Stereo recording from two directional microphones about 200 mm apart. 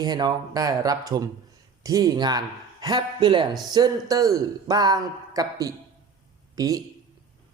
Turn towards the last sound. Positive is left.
turn(degrees=-15)  # may be behind; listen again after turning